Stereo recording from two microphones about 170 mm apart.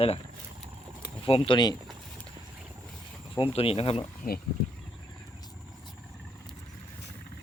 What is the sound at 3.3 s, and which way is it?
Speech, 35° left (ahead or behind).